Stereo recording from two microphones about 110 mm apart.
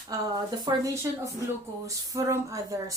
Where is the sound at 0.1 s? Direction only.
30° right (ahead or behind).